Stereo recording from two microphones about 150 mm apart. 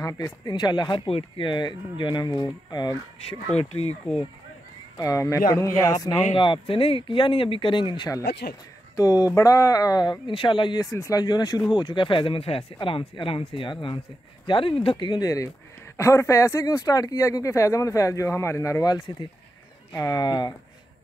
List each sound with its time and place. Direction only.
0.0 s speech: 25° left (ahead or behind)
3.5 s speech: 45° left (ahead or behind)
4.9 s speech: 20° left (ahead or behind)
6.3 s speech: 35° left (ahead or behind)
8.3 s speech: 90° left
8.9 s speech: 25° left (ahead or behind)